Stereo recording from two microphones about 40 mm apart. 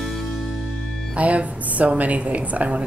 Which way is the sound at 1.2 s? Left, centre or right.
Right.